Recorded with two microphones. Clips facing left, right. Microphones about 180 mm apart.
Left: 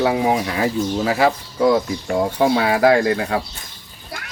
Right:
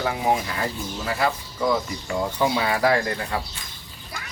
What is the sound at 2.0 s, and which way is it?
Speech, 65° left (ahead or behind).